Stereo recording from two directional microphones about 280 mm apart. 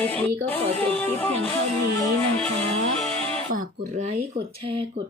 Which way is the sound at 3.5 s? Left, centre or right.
Right.